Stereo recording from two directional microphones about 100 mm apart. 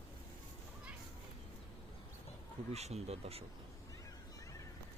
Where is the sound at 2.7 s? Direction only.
90° right.